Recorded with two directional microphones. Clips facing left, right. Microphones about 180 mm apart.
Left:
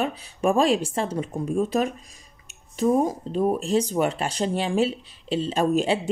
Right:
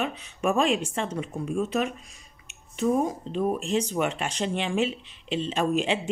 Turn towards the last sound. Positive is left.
turn(degrees=35)  # may be behind; listen again after turning